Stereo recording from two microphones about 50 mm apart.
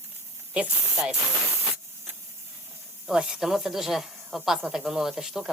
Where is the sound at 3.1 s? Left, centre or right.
Centre.